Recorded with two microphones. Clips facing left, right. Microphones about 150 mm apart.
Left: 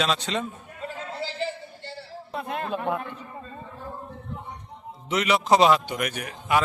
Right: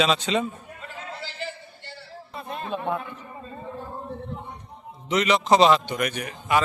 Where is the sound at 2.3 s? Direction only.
70° left (ahead or behind).